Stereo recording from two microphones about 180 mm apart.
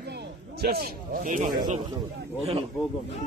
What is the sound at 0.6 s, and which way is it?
Speech, 60° right (ahead or behind).